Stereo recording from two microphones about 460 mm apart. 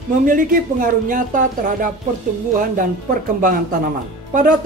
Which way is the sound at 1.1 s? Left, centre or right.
Centre.